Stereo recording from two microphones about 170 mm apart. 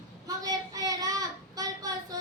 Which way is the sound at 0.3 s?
20° right (ahead or behind).